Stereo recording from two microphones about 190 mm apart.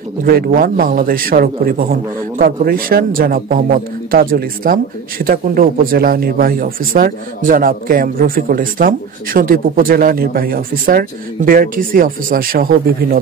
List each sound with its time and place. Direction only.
0.2 s speech: 50° right (ahead or behind)